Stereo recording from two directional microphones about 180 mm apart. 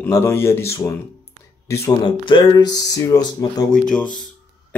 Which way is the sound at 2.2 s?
25° left (ahead or behind).